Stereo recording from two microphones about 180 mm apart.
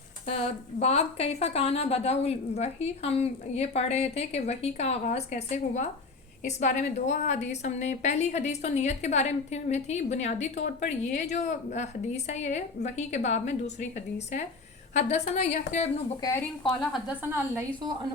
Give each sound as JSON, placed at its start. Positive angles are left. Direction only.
{"t": 0.3, "sound": "a woman's voice", "side_deg": 35}
{"t": 14.9, "sound": "a woman's voice", "side_deg": 40}
{"t": 16.6, "sound": "a woman's voice", "side_deg": 0}
{"t": 17.3, "sound": "a woman's voice", "side_deg": -15}